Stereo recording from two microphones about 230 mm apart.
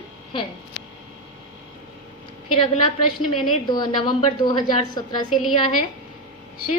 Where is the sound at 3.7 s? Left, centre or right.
Centre.